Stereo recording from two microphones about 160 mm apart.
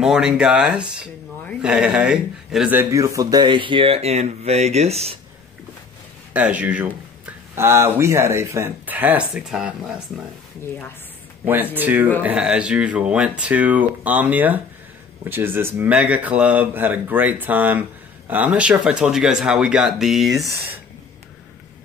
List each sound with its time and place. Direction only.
0.0 s a man's voice: 5° right (ahead or behind); by 5.1 s 40° right (ahead or behind)
6.3 s speech: 10° right (ahead or behind)
11.7 s speech: 10° right (ahead or behind)